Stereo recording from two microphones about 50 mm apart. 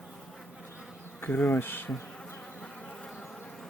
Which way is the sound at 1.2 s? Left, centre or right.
Left.